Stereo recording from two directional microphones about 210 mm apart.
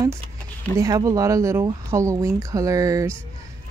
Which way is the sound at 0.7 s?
15° right (ahead or behind).